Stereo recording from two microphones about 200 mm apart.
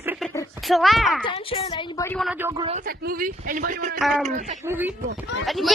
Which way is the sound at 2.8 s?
45° right (ahead or behind).